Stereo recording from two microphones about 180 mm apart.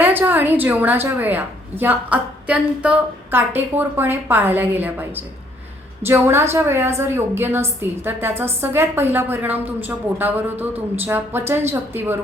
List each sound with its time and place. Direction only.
0.0 s a woman's voice: 10° right (ahead or behind)